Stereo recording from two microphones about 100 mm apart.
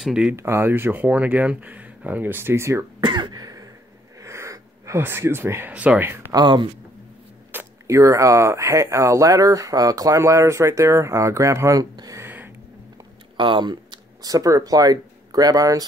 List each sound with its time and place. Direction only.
0.0 s speech: 10° right (ahead or behind)
0.4 s speech: 25° right (ahead or behind)
3.0 s throat clearing: 50° right (ahead or behind)
4.2 s speech: 30° right (ahead or behind)
6.3 s speech: 50° right (ahead or behind)
7.5 s speech: 30° right (ahead or behind)
12.2 s a sound: 20° right (ahead or behind)
13.4 s a sound: 50° right (ahead or behind)
14.3 s speech: 35° right (ahead or behind)